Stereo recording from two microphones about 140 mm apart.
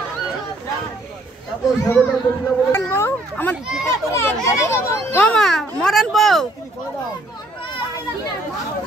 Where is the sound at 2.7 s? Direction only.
15° left (ahead or behind); by 6.5 s centre (ahead or behind).